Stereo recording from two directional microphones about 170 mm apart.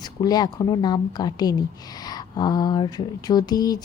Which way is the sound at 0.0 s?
25° left (ahead or behind).